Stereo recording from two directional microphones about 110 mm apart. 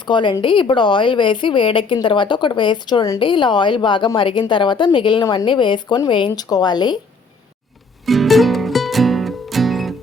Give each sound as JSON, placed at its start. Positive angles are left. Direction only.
{"t": 0.0, "sound": "a woman's voice", "side_deg": 45}
{"t": 8.0, "sound": "music", "side_deg": 0}